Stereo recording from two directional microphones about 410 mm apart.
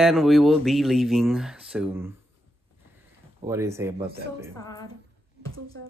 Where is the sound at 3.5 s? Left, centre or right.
Centre.